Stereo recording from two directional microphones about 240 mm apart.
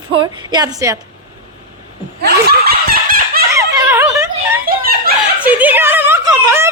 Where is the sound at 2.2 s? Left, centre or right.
Right.